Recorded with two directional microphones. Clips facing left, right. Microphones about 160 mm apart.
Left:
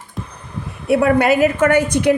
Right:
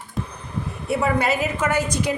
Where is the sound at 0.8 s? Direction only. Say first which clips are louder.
Left 8 dB; 65° left (ahead or behind).